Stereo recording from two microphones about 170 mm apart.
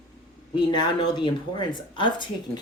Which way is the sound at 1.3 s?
25° left (ahead or behind).